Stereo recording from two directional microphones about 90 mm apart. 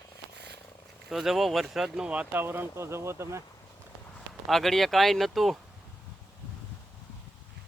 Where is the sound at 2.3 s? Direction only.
25° right (ahead or behind).